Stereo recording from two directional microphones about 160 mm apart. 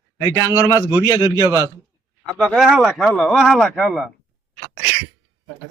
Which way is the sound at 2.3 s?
Centre (ahead or behind).